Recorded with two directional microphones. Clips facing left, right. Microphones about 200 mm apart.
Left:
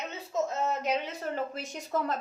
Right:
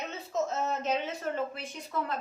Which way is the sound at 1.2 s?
40° left (ahead or behind).